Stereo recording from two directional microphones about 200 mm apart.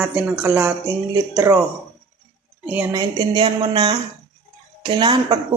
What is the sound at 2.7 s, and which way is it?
Speech, 20° right (ahead or behind).